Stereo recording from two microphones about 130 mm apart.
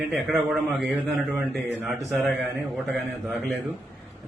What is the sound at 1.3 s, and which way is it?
Speech, 15° right (ahead or behind).